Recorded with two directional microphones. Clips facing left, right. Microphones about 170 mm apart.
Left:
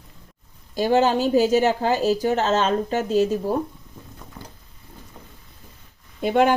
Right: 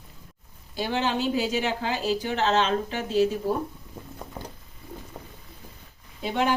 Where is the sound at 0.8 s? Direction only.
45° left (ahead or behind).